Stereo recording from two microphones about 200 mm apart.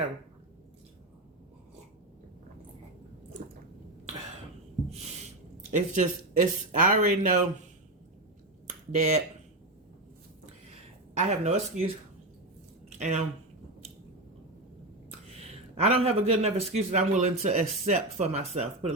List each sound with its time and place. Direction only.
5.7 s speech: 40° right (ahead or behind)
9.0 s speech: 35° right (ahead or behind)
11.2 s speech: 35° right (ahead or behind)
13.0 s speech: 35° right (ahead or behind)
15.3 s speech: 30° right (ahead or behind)